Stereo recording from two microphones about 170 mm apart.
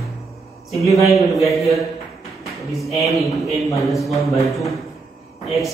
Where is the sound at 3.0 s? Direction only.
Centre (ahead or behind).